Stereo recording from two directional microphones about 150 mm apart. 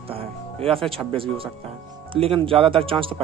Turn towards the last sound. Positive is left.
turn(degrees=-35)  # may be behind; listen again after turning